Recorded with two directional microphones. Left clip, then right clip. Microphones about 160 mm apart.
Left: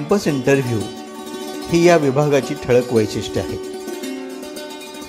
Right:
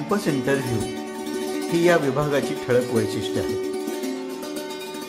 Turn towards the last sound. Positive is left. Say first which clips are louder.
# left 5 dB
turn(degrees=25)  # may be behind; listen again after turning